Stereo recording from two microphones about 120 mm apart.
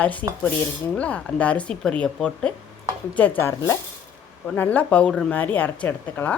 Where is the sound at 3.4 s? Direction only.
20° left (ahead or behind).